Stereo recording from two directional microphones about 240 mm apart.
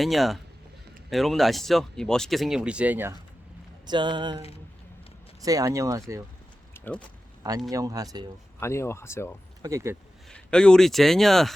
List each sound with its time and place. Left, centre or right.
0.0 s speech: centre
3.8 s speech: centre
6.7 s a sound: centre
7.7 s speech: centre
8.6 s speech: centre
9.6 s speech: centre
10.2 s speech: centre